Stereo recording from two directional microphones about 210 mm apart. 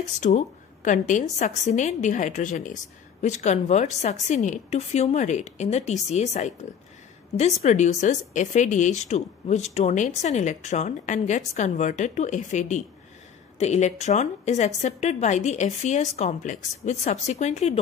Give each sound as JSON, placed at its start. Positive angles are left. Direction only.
{"t": 0.2, "sound": "speech", "side_deg": 35}